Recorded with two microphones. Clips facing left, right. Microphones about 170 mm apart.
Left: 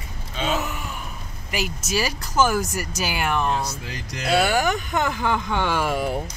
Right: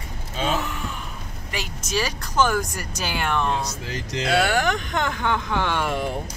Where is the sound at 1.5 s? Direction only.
5° left (ahead or behind).